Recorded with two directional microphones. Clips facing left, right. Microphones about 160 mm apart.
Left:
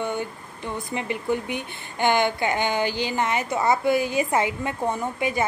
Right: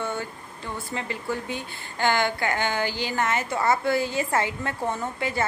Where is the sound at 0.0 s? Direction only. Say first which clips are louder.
Left 3 dB; 15° left (ahead or behind).